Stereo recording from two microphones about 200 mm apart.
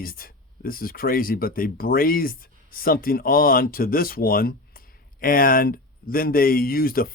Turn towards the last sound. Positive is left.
turn(degrees=45)  # may be behind; listen again after turning